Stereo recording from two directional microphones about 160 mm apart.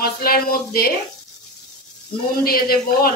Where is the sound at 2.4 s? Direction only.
70° left (ahead or behind).